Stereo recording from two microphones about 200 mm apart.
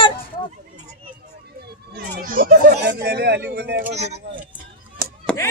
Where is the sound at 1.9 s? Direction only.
45° right (ahead or behind).